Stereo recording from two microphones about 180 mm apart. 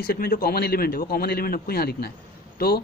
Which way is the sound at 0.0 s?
55° left (ahead or behind).